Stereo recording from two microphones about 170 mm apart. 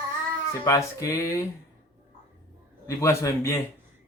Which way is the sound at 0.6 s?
20° left (ahead or behind).